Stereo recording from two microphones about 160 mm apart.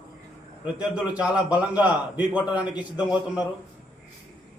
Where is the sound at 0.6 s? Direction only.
10° right (ahead or behind).